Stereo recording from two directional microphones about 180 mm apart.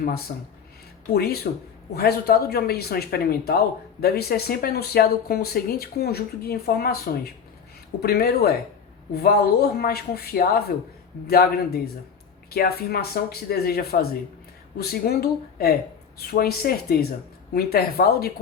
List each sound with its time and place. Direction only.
0.3 s speech: 55° left (ahead or behind)